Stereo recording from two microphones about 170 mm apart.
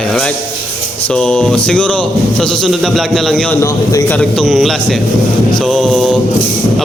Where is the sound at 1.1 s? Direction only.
5° left (ahead or behind).